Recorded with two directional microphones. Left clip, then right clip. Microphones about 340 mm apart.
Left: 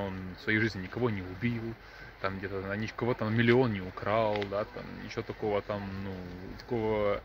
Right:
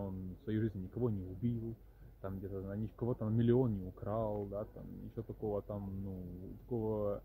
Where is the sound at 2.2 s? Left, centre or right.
Centre.